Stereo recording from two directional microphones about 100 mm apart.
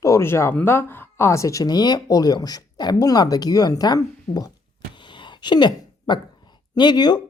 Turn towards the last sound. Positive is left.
turn(degrees=45)  # may be behind; listen again after turning